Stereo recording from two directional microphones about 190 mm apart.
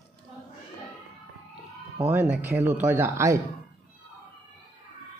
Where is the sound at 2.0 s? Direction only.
10° right (ahead or behind).